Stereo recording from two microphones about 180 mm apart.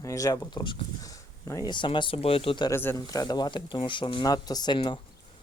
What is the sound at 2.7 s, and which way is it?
Speech, 15° left (ahead or behind).